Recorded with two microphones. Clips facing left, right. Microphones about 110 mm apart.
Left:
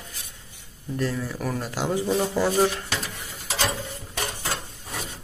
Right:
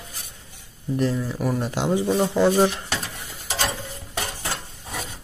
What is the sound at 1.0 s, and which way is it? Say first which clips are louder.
Speech: right 3 dB; 15° right (ahead or behind).